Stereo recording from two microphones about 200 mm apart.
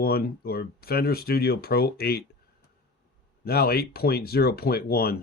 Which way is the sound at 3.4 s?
50° left (ahead or behind).